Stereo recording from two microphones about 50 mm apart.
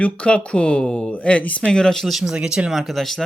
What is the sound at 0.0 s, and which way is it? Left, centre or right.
Speech, left.